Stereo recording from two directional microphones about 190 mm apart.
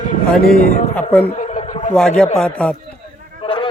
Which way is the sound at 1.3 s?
35° left (ahead or behind).